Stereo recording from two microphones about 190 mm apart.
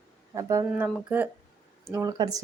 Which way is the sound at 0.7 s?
5° right (ahead or behind).